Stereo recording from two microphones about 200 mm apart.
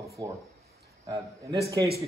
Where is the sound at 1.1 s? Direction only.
15° right (ahead or behind).